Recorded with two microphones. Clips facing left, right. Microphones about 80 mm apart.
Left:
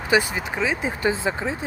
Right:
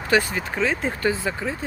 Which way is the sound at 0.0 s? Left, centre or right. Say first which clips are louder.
Even; centre.